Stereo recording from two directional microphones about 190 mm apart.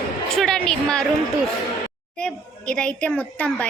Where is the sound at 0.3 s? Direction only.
5° left (ahead or behind).